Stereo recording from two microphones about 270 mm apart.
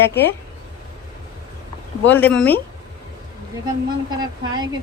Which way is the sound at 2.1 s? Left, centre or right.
Centre.